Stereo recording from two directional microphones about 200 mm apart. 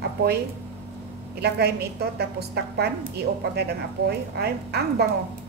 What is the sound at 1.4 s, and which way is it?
A woman's voice, 55° right (ahead or behind).